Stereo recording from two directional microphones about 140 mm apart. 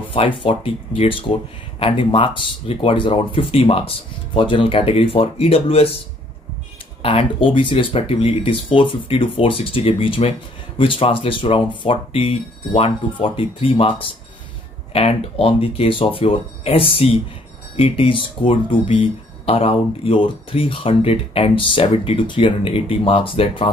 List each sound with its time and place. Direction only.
0.4 s speech: 40° left (ahead or behind)
7.0 s speech: 40° left (ahead or behind)